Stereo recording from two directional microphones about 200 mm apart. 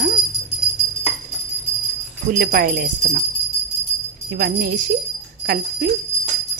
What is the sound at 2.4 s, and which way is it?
Speech, 45° right (ahead or behind).